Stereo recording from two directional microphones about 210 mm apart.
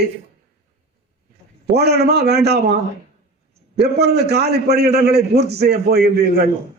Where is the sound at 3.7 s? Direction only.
50° right (ahead or behind).